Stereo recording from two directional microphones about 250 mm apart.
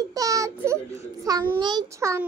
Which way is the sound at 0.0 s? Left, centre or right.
Centre.